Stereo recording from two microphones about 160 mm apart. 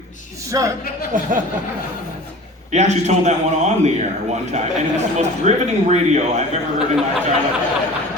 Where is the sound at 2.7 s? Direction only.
45° right (ahead or behind).